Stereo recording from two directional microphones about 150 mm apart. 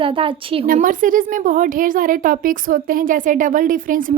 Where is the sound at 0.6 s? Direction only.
65° right (ahead or behind).